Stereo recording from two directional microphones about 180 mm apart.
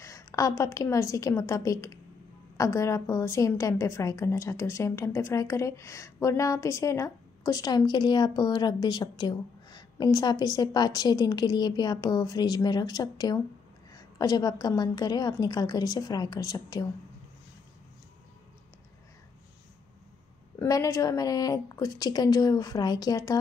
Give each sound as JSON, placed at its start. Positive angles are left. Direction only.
{"t": 0.0, "sound": "a woman's voice", "side_deg": 20}
{"t": 20.5, "sound": "a woman's voice", "side_deg": 20}